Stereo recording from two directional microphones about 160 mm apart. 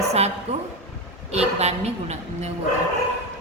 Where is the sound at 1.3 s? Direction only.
40° right (ahead or behind).